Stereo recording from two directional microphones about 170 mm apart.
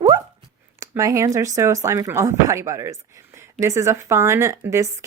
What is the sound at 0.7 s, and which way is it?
Speech, 20° right (ahead or behind).